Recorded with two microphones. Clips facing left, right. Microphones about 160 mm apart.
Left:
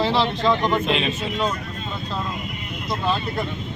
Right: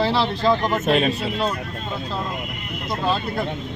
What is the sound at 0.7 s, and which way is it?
Speech, 45° right (ahead or behind).